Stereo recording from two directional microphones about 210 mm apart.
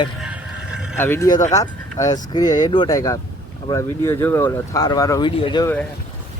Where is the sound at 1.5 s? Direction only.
15° left (ahead or behind).